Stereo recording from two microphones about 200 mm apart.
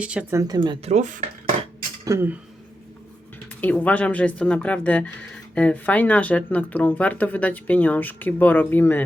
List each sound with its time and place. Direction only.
0.0 s speech: 5° right (ahead or behind); by 1.2 s 35° right (ahead or behind)
2.0 s speech: 15° right (ahead or behind)
3.6 s speech: 10° left (ahead or behind)